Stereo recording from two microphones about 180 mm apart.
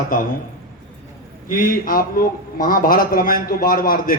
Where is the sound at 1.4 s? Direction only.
50° left (ahead or behind).